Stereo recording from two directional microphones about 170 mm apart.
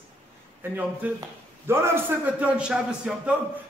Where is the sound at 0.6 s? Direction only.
10° right (ahead or behind).